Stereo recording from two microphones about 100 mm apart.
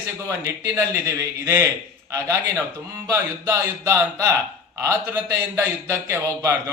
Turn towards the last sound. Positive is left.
turn(degrees=-30)  # may be behind; listen again after turning